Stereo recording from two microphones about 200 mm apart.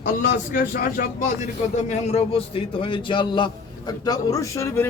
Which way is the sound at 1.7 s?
35° left (ahead or behind).